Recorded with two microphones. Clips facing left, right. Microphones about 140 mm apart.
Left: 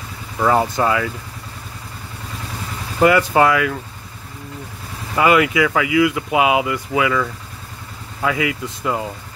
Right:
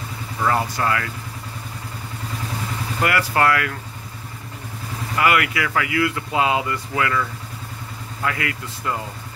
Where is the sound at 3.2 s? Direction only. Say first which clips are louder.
Left 4 dB; 20° left (ahead or behind).